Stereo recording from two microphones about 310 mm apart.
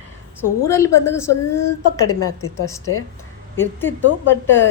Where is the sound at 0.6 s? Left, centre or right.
Centre.